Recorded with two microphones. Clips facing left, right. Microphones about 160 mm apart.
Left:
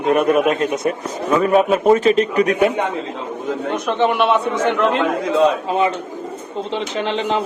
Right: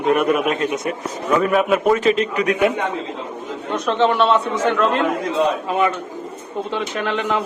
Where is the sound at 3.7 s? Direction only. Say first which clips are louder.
Right 1 dB; 15° left (ahead or behind).